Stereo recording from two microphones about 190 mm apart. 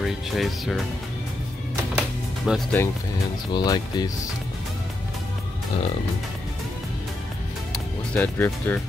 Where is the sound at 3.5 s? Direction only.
20° left (ahead or behind).